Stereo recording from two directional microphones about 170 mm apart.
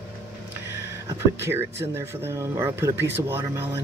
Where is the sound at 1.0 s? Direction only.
15° right (ahead or behind).